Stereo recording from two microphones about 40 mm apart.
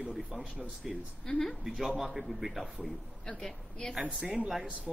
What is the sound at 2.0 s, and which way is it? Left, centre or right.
Speech, centre.